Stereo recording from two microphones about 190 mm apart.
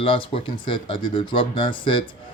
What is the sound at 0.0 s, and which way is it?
Speech, 30° left (ahead or behind).